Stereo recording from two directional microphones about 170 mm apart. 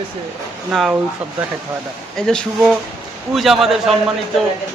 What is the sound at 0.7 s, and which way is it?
Speech, centre (ahead or behind).